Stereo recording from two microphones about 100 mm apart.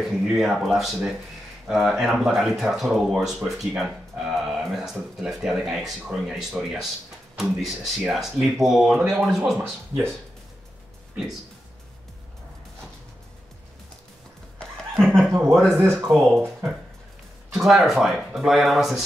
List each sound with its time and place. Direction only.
0.2 s speech: 5° right (ahead or behind)
9.6 s speech: 25° right (ahead or behind)
15.0 s chuckle: 5° left (ahead or behind)
15.5 s speech: centre (ahead or behind)
15.8 s speech: 25° right (ahead or behind)
16.1 s speech: centre (ahead or behind)